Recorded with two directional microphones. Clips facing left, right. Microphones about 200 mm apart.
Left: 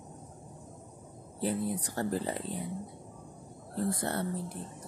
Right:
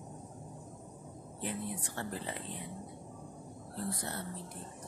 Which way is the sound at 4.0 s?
60° left (ahead or behind).